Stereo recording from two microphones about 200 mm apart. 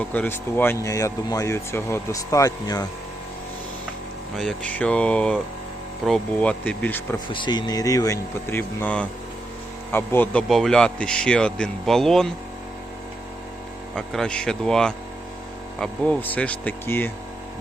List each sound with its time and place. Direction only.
0.0 s speech: 10° left (ahead or behind)
4.4 s speech: 5° left (ahead or behind)
7.3 s speech: 20° left (ahead or behind); by 12.3 s centre (ahead or behind)
13.9 s speech: 5° left (ahead or behind)